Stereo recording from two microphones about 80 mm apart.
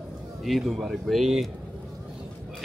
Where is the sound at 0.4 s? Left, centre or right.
Centre.